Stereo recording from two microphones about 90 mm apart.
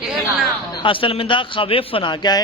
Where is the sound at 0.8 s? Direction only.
75° left (ahead or behind); by 2.4 s 55° left (ahead or behind).